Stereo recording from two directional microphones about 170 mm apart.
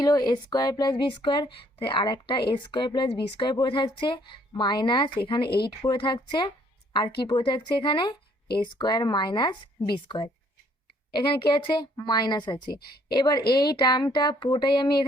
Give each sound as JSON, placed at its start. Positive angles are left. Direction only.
{"t": 0.0, "sound": "speech", "side_deg": 25}
{"t": 5.5, "sound": "speech", "side_deg": 70}
{"t": 5.8, "sound": "a woman's voice", "side_deg": 25}